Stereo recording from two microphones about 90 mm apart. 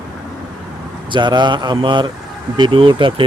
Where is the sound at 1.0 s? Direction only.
60° right (ahead or behind).